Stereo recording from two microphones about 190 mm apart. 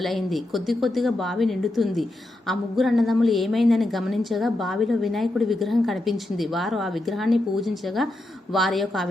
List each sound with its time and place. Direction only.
0.0 s a woman's voice: centre (ahead or behind)